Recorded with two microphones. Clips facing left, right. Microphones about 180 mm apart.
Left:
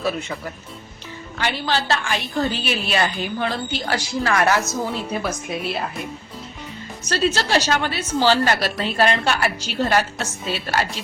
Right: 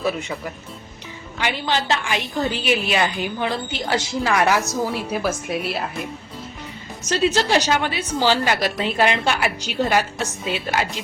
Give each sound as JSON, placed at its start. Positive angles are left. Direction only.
{"t": 0.2, "sound": "a woman's voice", "side_deg": -15}
{"t": 7.1, "sound": "a woman's voice", "side_deg": -15}